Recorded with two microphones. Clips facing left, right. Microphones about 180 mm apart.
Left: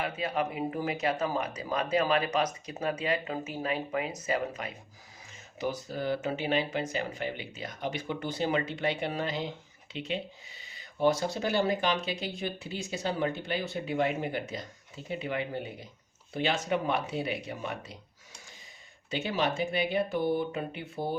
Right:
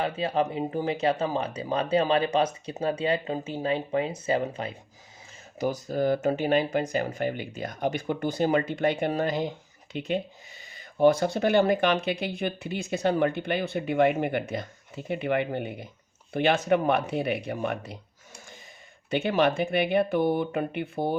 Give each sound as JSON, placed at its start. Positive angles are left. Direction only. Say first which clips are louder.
{"t": 0.0, "sound": "speech", "louder": "right 5 dB", "side_deg": -30}
{"t": 5.5, "sound": "speech", "louder": "right 6 dB", "side_deg": -45}
{"t": 19.1, "sound": "speech", "louder": "right 6 dB", "side_deg": -55}